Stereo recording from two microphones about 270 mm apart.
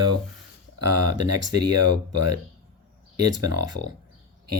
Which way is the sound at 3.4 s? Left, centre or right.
Right.